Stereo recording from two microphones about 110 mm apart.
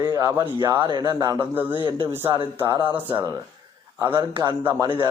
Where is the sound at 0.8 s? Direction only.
40° right (ahead or behind).